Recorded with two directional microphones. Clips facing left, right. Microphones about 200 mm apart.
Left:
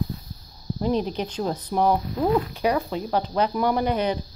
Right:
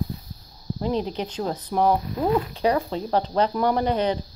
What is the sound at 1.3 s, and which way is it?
Speech, 15° left (ahead or behind).